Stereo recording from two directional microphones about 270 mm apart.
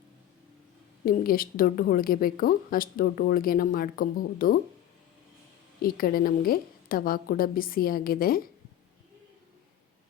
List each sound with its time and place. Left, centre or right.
1.0 s a woman's voice: left
5.8 s a woman's voice: left